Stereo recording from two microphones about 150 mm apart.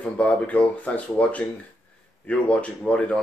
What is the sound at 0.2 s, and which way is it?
Speech, 10° left (ahead or behind).